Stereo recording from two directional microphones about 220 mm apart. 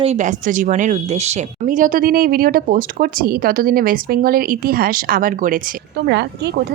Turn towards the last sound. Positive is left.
turn(degrees=-50)  # may be behind; listen again after turning